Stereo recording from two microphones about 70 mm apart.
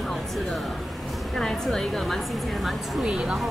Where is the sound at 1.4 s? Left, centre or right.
Centre.